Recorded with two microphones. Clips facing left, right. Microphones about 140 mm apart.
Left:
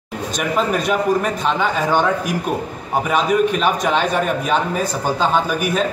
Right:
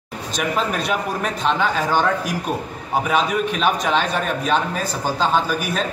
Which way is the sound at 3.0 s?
Centre (ahead or behind).